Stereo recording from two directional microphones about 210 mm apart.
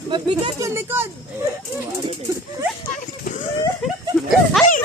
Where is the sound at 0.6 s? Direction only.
10° right (ahead or behind).